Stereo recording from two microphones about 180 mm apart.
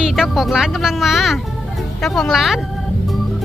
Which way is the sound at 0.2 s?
Centre (ahead or behind).